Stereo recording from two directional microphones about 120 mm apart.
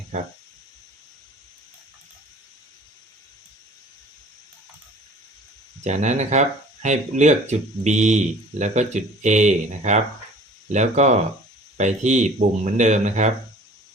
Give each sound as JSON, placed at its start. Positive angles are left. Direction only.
{"t": 5.8, "sound": "speech", "side_deg": -75}